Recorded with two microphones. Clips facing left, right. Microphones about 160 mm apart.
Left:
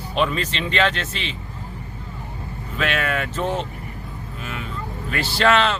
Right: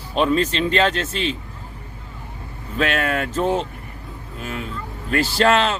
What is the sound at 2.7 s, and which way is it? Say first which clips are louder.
Speech: right 2 dB; 40° right (ahead or behind).